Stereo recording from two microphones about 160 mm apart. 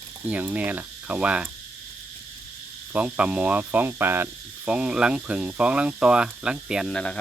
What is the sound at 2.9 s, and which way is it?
Speech, 10° right (ahead or behind).